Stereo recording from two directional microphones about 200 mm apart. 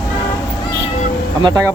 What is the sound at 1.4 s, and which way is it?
Speech, 20° right (ahead or behind).